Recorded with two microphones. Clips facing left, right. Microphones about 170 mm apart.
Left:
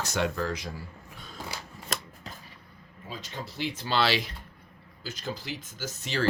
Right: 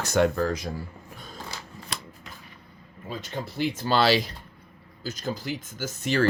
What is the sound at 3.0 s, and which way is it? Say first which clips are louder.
Speech: right 5 dB; 55° right (ahead or behind).